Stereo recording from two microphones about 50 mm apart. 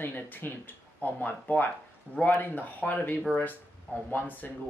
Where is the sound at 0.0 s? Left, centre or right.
Left.